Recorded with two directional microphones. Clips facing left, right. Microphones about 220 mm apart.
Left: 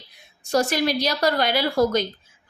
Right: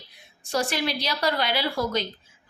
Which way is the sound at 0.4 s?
40° left (ahead or behind).